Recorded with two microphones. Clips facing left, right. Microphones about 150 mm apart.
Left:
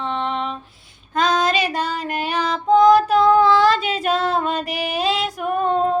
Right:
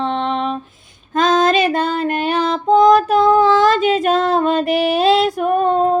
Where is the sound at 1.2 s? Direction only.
50° right (ahead or behind).